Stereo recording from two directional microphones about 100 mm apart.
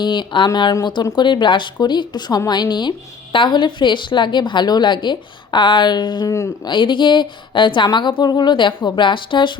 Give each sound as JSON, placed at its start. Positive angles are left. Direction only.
{"t": 0.0, "sound": "a woman's voice", "side_deg": 50}